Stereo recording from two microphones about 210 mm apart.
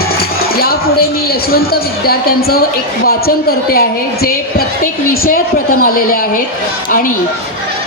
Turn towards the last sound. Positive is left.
turn(degrees=45)  # may be behind; listen again after turning